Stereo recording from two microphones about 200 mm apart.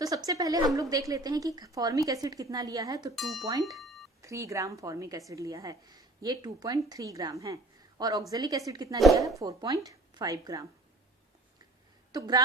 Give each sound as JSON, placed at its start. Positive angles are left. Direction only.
{"t": 0.0, "sound": "a woman's voice", "side_deg": -15}
{"t": 3.2, "sound": "speech", "side_deg": 0}
{"t": 3.8, "sound": "a sound", "side_deg": 0}
{"t": 4.2, "sound": "a woman's voice", "side_deg": -15}
{"t": 12.1, "sound": "speech", "side_deg": -20}